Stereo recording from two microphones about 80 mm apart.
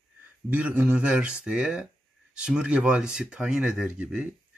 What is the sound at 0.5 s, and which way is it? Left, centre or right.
Speech, centre.